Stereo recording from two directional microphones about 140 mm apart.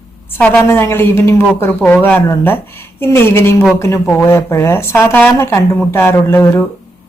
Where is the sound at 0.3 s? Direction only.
10° left (ahead or behind).